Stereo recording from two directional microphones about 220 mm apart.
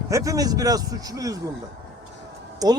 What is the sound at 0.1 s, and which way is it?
A man's voice, 15° right (ahead or behind).